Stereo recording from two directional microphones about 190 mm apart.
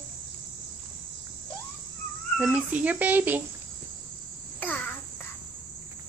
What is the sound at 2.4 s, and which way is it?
A child's voice, 5° right (ahead or behind).